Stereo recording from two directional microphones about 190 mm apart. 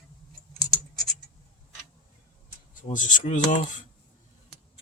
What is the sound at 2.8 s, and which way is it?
Speech, 40° left (ahead or behind).